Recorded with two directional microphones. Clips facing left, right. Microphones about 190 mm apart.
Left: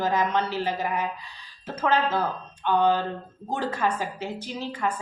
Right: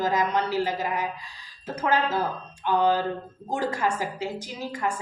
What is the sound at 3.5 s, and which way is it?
Speech, 10° right (ahead or behind).